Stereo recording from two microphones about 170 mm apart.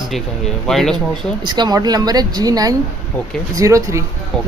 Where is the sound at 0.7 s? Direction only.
Centre (ahead or behind).